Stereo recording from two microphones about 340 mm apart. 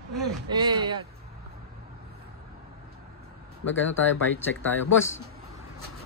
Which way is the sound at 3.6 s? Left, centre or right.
Left.